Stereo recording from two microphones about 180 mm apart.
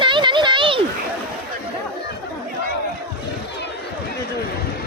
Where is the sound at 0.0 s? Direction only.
25° right (ahead or behind).